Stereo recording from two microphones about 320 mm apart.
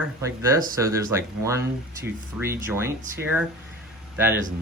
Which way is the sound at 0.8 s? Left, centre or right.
Centre.